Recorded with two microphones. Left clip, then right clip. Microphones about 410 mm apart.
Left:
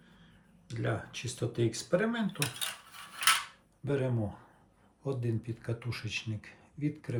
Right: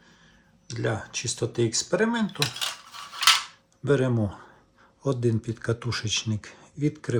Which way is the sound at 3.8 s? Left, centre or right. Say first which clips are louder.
Right 9 dB; centre.